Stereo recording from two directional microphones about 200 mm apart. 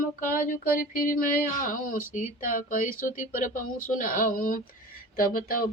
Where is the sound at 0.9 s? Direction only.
45° left (ahead or behind).